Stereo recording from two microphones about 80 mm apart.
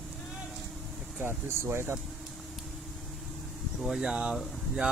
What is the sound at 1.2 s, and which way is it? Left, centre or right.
Speech, right.